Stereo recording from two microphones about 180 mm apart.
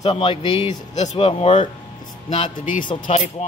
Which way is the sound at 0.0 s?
30° left (ahead or behind).